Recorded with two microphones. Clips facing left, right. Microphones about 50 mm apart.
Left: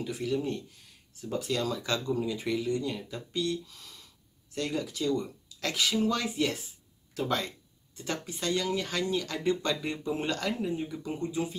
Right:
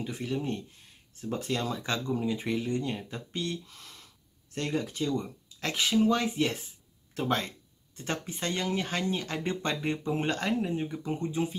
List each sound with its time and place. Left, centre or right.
0.0 s speech: right